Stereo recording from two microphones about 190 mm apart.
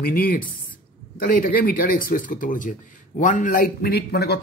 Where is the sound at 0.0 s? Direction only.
50° left (ahead or behind).